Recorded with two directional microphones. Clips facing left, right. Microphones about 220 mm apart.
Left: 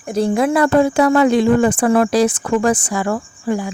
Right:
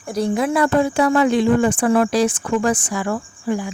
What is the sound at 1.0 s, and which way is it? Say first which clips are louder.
Speech: left 2 dB; 75° left (ahead or behind).